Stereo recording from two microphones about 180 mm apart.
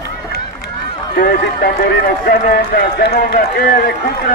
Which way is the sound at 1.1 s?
65° left (ahead or behind).